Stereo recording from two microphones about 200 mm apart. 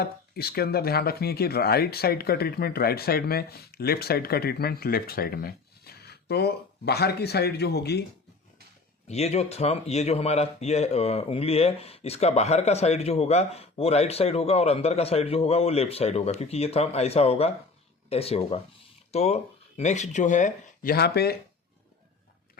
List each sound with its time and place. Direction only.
0.0 s speech: 50° left (ahead or behind)
9.0 s speech: 30° left (ahead or behind); by 21.3 s 50° left (ahead or behind)